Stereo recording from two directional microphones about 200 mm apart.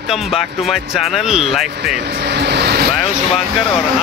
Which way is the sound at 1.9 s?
55° right (ahead or behind).